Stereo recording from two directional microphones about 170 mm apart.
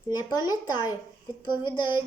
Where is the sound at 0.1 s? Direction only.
25° left (ahead or behind).